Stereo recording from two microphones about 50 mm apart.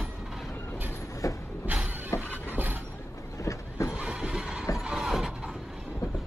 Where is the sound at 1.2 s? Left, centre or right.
Left.